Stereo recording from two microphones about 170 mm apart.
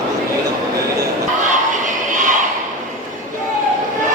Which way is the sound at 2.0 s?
50° right (ahead or behind).